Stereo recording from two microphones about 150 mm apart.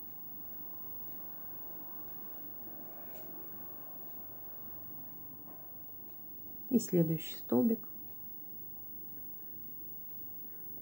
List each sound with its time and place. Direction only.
6.7 s speech: 15° right (ahead or behind)